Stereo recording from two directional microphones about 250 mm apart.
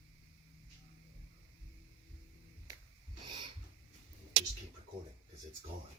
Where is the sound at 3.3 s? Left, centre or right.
Centre.